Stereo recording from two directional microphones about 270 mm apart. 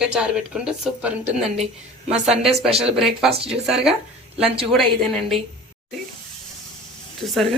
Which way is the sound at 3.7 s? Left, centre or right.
Centre.